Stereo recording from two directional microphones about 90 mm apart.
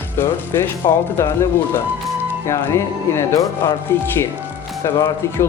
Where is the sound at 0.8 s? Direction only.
45° left (ahead or behind).